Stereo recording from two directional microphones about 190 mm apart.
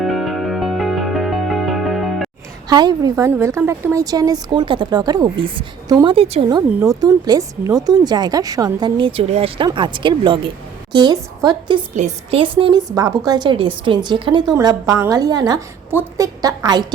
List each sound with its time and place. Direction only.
0.0 s music: centre (ahead or behind)
2.6 s a woman's voice: 20° right (ahead or behind)
6.7 s a woman's voice: 10° right (ahead or behind)
11.9 s a woman's voice: 35° right (ahead or behind)